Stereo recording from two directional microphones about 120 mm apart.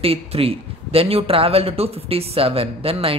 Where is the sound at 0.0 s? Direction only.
55° right (ahead or behind).